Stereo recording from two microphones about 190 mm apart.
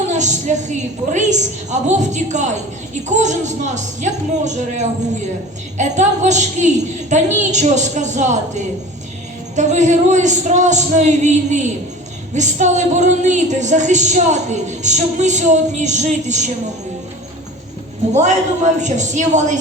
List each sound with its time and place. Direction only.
0.1 s a woman's voice: 40° right (ahead or behind)
18.1 s a woman's voice: 40° right (ahead or behind)